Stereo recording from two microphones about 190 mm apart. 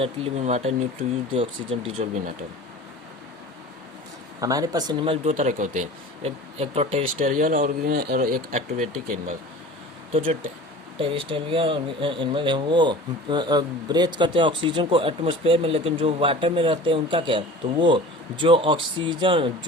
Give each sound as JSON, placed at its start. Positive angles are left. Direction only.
{"t": 0.0, "sound": "speech", "side_deg": -35}
{"t": 2.0, "sound": "speech", "side_deg": -40}
{"t": 4.4, "sound": "speech", "side_deg": -20}
{"t": 5.3, "sound": "speech", "side_deg": -40}
{"t": 7.3, "sound": "speech", "side_deg": -45}
{"t": 10.1, "sound": "speech", "side_deg": -30}